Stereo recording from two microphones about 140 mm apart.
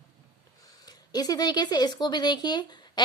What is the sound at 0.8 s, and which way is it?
Speech, 30° left (ahead or behind).